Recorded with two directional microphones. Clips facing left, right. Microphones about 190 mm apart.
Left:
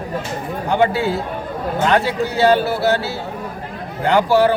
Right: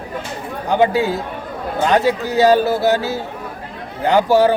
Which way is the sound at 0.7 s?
15° right (ahead or behind).